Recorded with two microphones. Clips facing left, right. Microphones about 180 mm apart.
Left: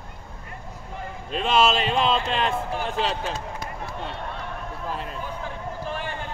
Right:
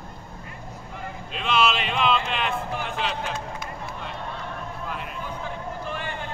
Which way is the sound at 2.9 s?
35° left (ahead or behind).